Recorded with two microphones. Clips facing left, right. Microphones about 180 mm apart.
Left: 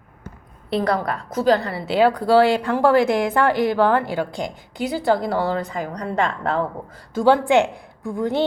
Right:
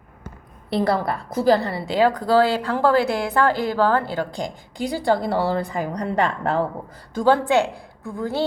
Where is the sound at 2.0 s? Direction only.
10° left (ahead or behind).